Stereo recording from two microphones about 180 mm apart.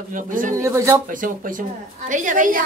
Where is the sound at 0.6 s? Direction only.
15° right (ahead or behind).